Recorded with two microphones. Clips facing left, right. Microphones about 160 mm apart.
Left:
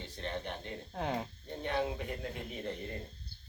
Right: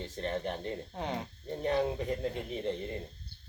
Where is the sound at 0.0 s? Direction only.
40° right (ahead or behind).